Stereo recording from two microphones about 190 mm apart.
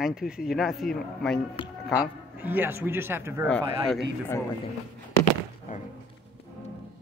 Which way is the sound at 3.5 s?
5° left (ahead or behind).